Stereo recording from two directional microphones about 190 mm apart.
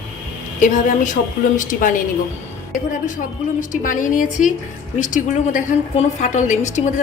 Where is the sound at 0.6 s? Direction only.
45° left (ahead or behind).